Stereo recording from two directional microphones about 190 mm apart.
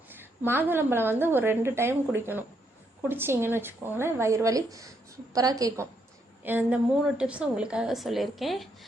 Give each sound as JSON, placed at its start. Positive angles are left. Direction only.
{"t": 0.1, "sound": "a woman's voice", "side_deg": -10}